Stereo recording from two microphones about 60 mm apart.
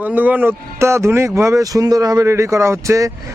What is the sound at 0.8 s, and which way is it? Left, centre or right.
Speech, right.